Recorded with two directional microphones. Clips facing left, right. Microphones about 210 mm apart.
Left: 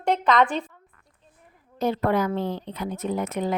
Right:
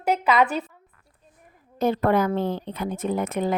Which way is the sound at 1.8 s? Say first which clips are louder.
Right 2 dB; 50° right (ahead or behind).